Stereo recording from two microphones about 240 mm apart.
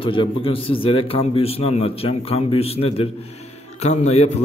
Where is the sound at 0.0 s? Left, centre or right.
Left.